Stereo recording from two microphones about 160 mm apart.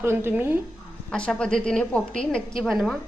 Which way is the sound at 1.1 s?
5° left (ahead or behind).